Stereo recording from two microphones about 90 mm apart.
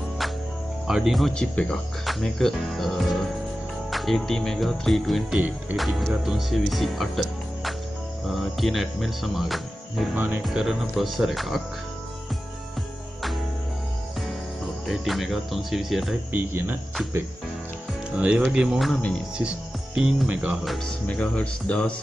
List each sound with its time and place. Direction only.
0.8 s speech: 5° right (ahead or behind)
1.3 s speech: 10° left (ahead or behind)
14.9 s speech: centre (ahead or behind)
16.3 s speech: 25° right (ahead or behind)
18.1 s speech: 15° right (ahead or behind)
18.9 s speech: 15° left (ahead or behind)
20.0 s speech: 5° right (ahead or behind)
20.6 s speech: centre (ahead or behind)
21.1 s speech: 15° left (ahead or behind)